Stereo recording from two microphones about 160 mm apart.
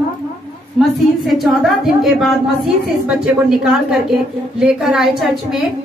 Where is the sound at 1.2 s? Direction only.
Centre (ahead or behind).